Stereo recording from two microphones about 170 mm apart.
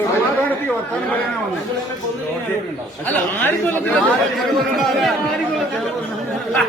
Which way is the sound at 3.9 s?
Centre (ahead or behind).